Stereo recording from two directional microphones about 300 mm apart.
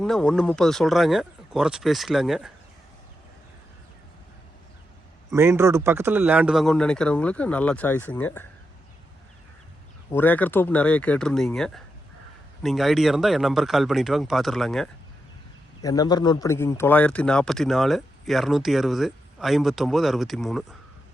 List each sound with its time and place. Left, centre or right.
0.0 s speech: centre
5.3 s speech: centre
10.1 s speech: centre
15.8 s speech: centre